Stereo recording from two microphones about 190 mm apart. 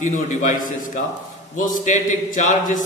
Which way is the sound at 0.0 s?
40° left (ahead or behind).